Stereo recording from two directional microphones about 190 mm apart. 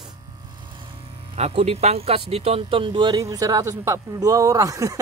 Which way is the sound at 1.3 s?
35° right (ahead or behind).